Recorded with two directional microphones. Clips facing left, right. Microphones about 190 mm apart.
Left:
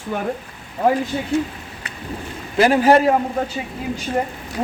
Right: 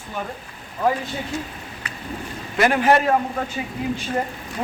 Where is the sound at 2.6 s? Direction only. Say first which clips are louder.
Left 4 dB; 35° left (ahead or behind).